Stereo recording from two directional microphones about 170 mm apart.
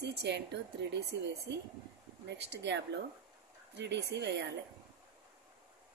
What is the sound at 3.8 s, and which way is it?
Speech, 80° right.